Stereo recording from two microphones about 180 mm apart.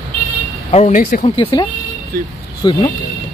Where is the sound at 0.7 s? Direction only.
40° left (ahead or behind).